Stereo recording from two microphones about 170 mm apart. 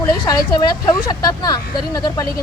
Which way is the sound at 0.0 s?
20° left (ahead or behind).